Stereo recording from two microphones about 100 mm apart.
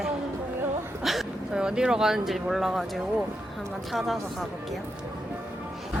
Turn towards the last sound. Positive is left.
turn(degrees=0)  # may be behind; listen again after turning